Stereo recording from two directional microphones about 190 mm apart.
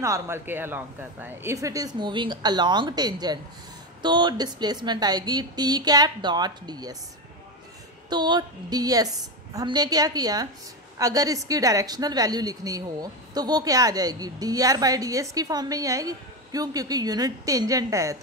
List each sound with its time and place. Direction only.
0.0 s a woman's voice: 15° right (ahead or behind)
8.1 s a woman's voice: 20° right (ahead or behind)